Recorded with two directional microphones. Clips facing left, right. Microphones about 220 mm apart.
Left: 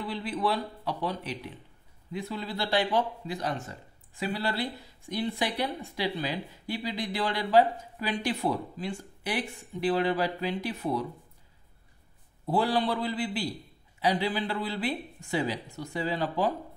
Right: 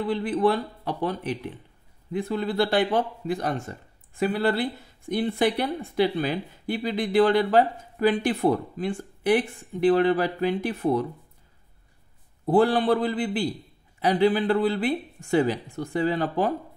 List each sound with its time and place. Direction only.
0.1 s speech: 50° right (ahead or behind)
12.4 s speech: 55° right (ahead or behind)